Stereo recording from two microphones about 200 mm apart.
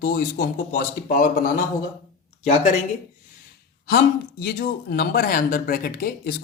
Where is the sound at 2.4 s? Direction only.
35° left (ahead or behind).